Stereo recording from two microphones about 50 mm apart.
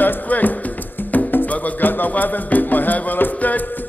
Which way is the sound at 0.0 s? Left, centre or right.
Left.